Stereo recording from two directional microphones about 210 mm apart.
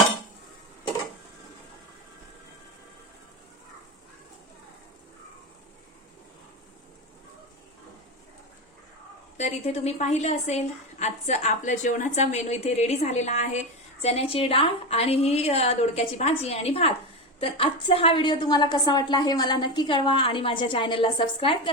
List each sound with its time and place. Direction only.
9.4 s a woman's voice: 30° left (ahead or behind)